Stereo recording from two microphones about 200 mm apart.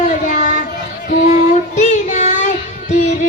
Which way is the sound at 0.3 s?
40° left (ahead or behind).